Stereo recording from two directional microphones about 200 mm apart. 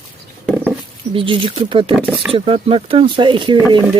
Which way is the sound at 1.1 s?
25° right (ahead or behind).